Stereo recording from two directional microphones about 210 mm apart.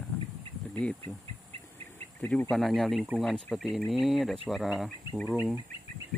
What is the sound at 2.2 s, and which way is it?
Speech, 10° left (ahead or behind).